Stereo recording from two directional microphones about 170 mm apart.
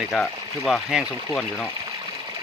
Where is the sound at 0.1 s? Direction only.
Centre (ahead or behind).